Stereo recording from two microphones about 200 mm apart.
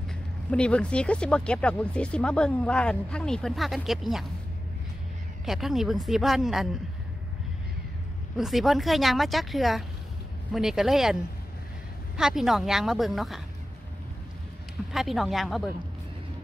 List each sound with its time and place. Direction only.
0.5 s speech: 5° left (ahead or behind)
5.4 s speech: centre (ahead or behind)
8.4 s speech: centre (ahead or behind)
12.2 s speech: centre (ahead or behind)
14.9 s speech: centre (ahead or behind)